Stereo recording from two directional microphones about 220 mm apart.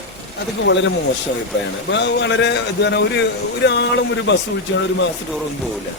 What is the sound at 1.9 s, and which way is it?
A man's voice, 50° left (ahead or behind).